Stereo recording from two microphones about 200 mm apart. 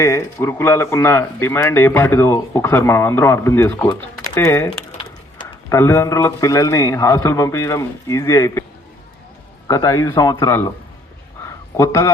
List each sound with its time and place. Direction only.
0.0 s speech: 15° left (ahead or behind)
9.6 s speech: 20° left (ahead or behind)
11.4 s a sound: 15° left (ahead or behind)